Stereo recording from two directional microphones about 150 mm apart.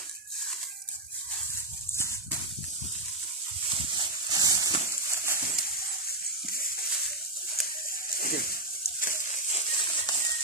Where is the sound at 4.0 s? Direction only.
25° right (ahead or behind).